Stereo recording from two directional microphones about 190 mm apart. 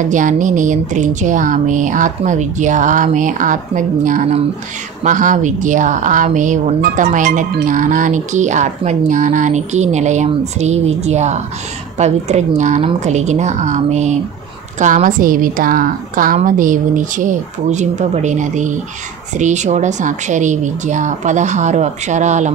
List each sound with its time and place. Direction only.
0.1 s a woman's voice: 40° right (ahead or behind)